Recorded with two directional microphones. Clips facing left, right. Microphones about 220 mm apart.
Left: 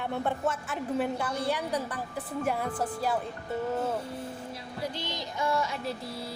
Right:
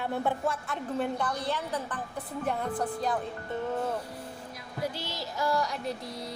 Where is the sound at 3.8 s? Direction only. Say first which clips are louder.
Left 1 dB; 5° left (ahead or behind).